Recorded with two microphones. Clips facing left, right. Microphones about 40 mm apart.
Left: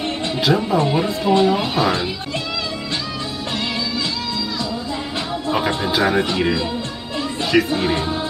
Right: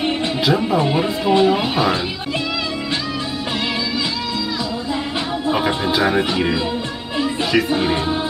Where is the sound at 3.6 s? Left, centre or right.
Centre.